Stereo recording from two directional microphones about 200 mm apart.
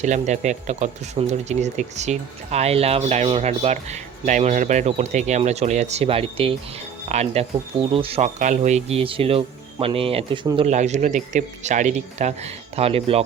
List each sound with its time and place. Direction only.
0.0 s speech: 35° right (ahead or behind)
10.7 s speech: 35° right (ahead or behind)